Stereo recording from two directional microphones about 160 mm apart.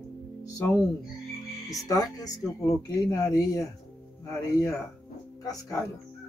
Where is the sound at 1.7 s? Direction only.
25° left (ahead or behind).